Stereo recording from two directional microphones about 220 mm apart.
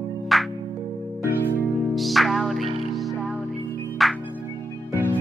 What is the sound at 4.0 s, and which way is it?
Music, centre (ahead or behind).